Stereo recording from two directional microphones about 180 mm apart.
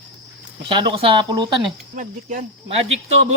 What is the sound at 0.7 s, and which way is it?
Speech, 30° right (ahead or behind).